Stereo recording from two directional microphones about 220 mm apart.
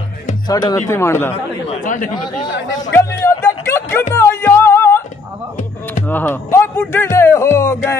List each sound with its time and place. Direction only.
0.5 s speech: 15° left (ahead or behind)
1.3 s speech: 30° left (ahead or behind)
2.8 s music: 15° left (ahead or behind)
6.0 s speech: 10° left (ahead or behind)